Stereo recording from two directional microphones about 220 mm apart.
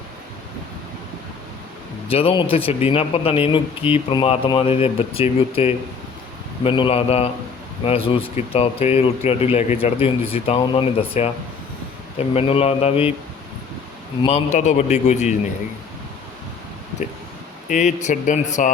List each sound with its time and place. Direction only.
2.0 s speech: 25° left (ahead or behind)
14.2 s a man's voice: 25° left (ahead or behind)
17.7 s a man's voice: 35° left (ahead or behind)